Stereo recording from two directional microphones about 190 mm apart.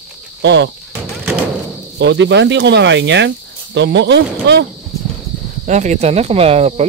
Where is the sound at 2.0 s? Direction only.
65° right (ahead or behind).